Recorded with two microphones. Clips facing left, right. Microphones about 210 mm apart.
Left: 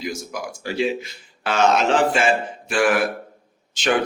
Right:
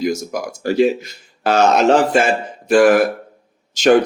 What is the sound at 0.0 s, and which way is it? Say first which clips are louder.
Speech: right 8 dB; 45° right (ahead or behind).